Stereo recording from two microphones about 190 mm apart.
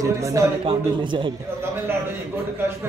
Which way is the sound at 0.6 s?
25° right (ahead or behind).